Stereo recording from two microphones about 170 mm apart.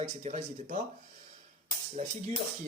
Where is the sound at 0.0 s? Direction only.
45° right (ahead or behind).